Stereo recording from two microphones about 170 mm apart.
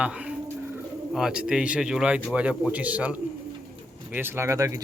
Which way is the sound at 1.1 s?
5° right (ahead or behind).